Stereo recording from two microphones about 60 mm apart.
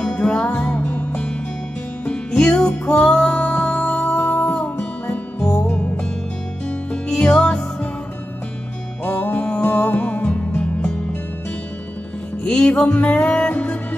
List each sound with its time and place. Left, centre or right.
0.0 s music: centre; by 4.6 s left
4.6 s music: left
9.0 s music: left
12.4 s music: centre